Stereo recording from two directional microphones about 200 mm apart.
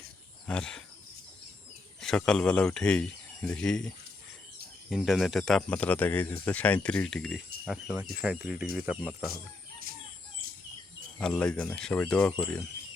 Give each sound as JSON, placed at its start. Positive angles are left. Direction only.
{"t": 0.4, "sound": "speech", "side_deg": 5}
{"t": 2.0, "sound": "speech", "side_deg": 5}
{"t": 9.9, "sound": "bird", "side_deg": -45}
{"t": 11.2, "sound": "speech", "side_deg": 5}